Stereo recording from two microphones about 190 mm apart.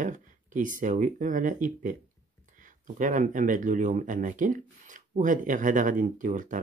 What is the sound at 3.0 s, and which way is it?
Speech, 40° right (ahead or behind).